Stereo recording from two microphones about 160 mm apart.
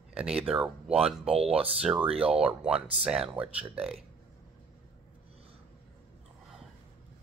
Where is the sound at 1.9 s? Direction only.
30° right (ahead or behind).